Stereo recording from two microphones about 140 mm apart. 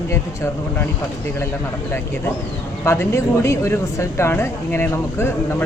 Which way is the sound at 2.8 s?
20° left (ahead or behind).